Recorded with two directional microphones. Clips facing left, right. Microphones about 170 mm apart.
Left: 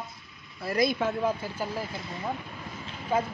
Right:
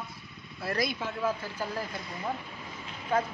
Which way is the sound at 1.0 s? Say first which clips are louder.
Left 8 dB; 55° left (ahead or behind).